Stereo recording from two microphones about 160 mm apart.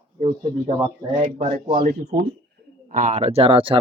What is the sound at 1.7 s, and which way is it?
Speech, 70° right (ahead or behind).